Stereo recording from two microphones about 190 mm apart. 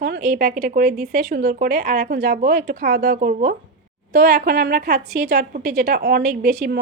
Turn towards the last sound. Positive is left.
turn(degrees=-50)  # may be behind; listen again after turning